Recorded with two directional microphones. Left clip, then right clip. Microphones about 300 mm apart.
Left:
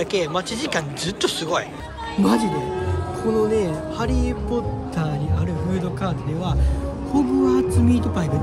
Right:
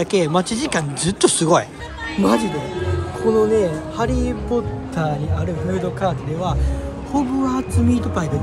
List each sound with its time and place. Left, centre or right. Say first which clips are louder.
0.0 s speech: right 4 dB; centre
2.2 s speech: right 2 dB; centre